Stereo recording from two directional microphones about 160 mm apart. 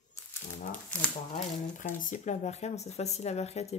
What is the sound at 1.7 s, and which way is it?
Speech, 55° left (ahead or behind).